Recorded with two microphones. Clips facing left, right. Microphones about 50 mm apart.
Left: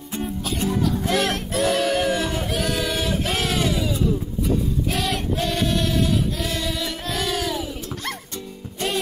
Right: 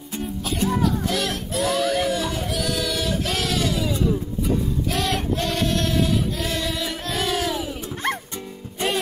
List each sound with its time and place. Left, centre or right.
1.0 s music: left; by 3.8 s centre
3.8 s music: centre
4.9 s choir: centre